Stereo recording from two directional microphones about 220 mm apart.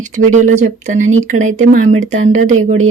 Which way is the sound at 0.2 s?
35° right (ahead or behind).